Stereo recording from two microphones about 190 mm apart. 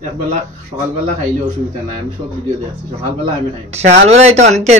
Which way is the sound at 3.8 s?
35° right (ahead or behind).